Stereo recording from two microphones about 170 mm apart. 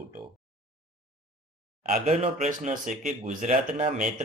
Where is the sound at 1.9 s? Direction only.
40° right (ahead or behind).